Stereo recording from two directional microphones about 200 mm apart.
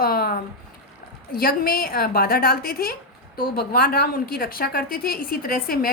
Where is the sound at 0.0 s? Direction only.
50° left (ahead or behind).